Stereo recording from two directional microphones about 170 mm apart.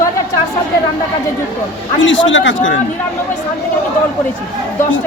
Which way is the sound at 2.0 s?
90° left.